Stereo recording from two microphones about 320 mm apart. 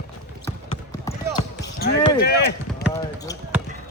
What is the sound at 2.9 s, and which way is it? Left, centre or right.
Speech, centre.